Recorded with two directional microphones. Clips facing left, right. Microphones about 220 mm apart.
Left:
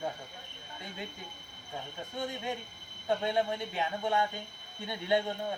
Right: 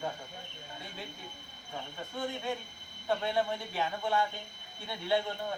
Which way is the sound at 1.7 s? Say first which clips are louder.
Even; 20° left (ahead or behind).